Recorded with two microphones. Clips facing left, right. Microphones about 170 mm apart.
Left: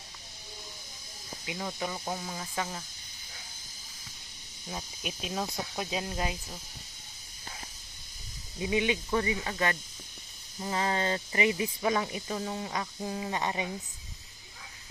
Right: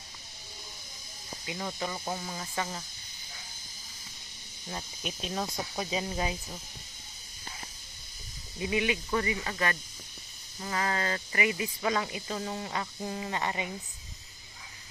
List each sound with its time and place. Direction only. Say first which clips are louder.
1.5 s speech: even; 5° left (ahead or behind)
5.2 s speech: even; 5° left (ahead or behind)
8.7 s speech: left 1 dB; 20° left (ahead or behind)
9.4 s speech: left 1 dB; 5° left (ahead or behind)
10.6 s speech: left 2 dB; 15° left (ahead or behind)
11.8 s speech: left 1 dB; 15° left (ahead or behind)